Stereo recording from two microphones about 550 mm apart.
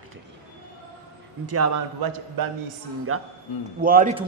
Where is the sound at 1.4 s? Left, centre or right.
Right.